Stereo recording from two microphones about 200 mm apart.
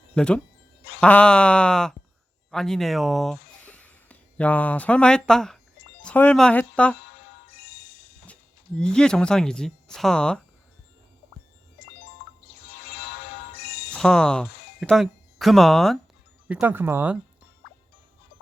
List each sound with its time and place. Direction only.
0.1 s speech: 5° left (ahead or behind)
7.5 s music: 50° left (ahead or behind)
8.8 s speech: 5° left (ahead or behind)
12.9 s music: 55° left (ahead or behind)
13.9 s speech: 5° left (ahead or behind)